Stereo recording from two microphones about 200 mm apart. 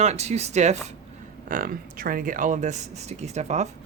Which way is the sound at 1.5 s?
45° right (ahead or behind).